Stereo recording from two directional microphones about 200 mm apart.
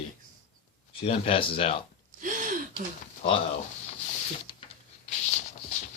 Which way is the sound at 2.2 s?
40° right (ahead or behind).